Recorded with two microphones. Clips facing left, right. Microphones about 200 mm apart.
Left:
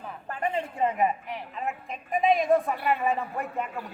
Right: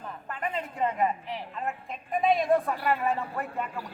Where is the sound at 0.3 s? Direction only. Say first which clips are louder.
Left 4 dB; 30° left (ahead or behind).